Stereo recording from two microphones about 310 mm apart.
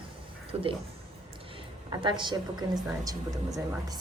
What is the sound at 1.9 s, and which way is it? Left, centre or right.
Speech, centre.